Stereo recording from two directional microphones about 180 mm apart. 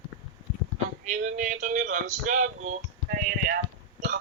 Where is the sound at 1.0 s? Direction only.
45° right (ahead or behind).